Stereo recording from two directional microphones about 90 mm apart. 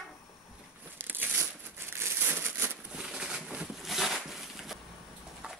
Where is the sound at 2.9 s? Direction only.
10° right (ahead or behind).